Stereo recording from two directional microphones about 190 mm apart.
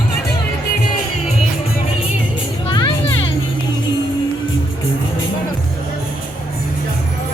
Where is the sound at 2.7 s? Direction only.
25° left (ahead or behind).